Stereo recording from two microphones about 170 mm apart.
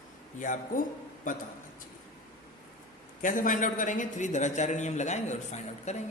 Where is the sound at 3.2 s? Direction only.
50° left (ahead or behind).